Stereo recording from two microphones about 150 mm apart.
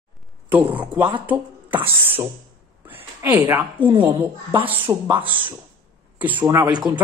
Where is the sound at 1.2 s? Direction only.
10° right (ahead or behind).